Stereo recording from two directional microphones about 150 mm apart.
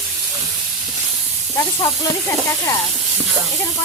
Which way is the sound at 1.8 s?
25° left (ahead or behind).